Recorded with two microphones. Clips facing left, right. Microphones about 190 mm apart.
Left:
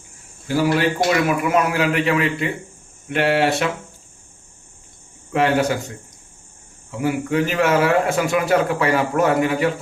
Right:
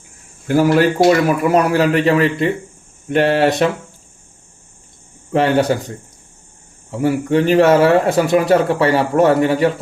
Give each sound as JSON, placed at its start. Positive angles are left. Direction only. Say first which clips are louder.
{"t": 0.4, "sound": "a man's voice", "louder": "right 5 dB", "side_deg": -50}
{"t": 5.3, "sound": "a man's voice", "louder": "right 4 dB", "side_deg": -35}
{"t": 7.0, "sound": "a man's voice", "louder": "right 5 dB", "side_deg": -35}